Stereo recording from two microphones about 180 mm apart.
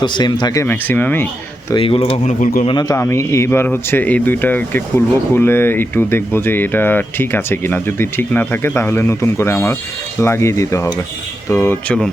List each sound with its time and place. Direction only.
0.0 s speech: 25° left (ahead or behind); by 1.3 s 10° left (ahead or behind)
1.7 s speech: 30° left (ahead or behind)
2.4 s a man's voice: 50° left (ahead or behind)
2.6 s speech: 20° left (ahead or behind)